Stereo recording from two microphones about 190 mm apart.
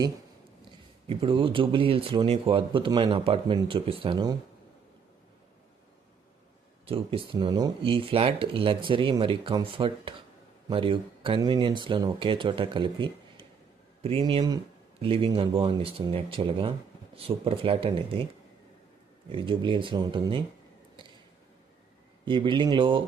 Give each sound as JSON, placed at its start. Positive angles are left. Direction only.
{"t": 1.0, "sound": "a man's voice", "side_deg": -30}
{"t": 6.8, "sound": "a man's voice", "side_deg": -30}
{"t": 19.3, "sound": "a man's voice", "side_deg": -25}
{"t": 22.3, "sound": "a man's voice", "side_deg": -25}